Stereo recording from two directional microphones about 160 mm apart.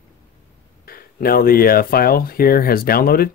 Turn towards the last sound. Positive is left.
turn(degrees=70)  # may be behind; listen again after turning